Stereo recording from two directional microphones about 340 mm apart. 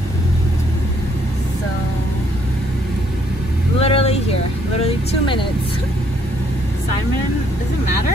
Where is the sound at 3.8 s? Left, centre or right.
Centre.